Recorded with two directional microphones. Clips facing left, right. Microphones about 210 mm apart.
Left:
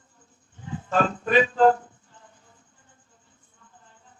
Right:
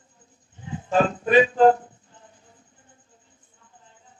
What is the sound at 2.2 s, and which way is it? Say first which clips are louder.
Music: right 3 dB; 20° right (ahead or behind).